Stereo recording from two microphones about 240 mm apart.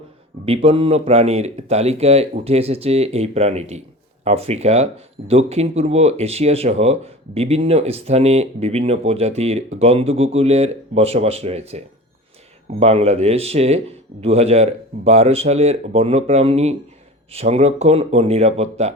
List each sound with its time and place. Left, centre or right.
0.4 s speech: right
12.8 s speech: right